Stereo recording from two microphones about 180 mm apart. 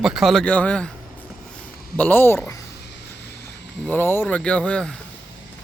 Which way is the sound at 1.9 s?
10° left (ahead or behind).